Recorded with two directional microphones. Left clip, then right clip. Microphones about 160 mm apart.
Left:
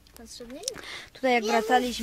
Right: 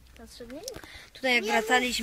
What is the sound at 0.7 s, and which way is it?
Speech, 60° left (ahead or behind).